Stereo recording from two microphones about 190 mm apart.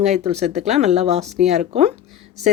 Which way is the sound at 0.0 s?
35° right (ahead or behind).